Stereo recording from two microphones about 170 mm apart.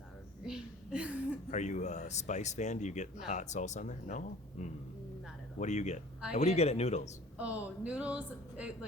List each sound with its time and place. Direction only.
0.4 s a sound: 5° right (ahead or behind)
1.5 s speech: 45° left (ahead or behind)
7.3 s speech: 10° right (ahead or behind)